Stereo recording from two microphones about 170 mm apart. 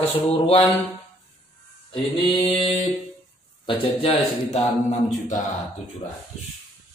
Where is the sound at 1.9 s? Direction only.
30° left (ahead or behind).